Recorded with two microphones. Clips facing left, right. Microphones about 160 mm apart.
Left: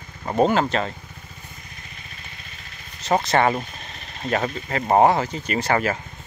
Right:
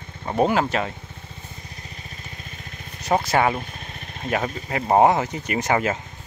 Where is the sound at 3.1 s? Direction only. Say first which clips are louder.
Left 1 dB; 5° right (ahead or behind).